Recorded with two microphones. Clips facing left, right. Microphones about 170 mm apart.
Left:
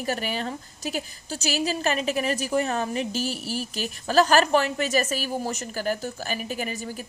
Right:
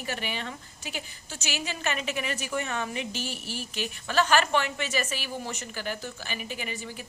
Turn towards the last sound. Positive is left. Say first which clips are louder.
# left 6 dB
turn(degrees=40)  # may be behind; listen again after turning